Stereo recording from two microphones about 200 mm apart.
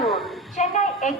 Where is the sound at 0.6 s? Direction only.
35° left (ahead or behind).